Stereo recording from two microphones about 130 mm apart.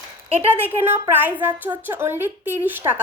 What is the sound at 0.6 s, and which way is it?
A woman's voice, 15° right (ahead or behind).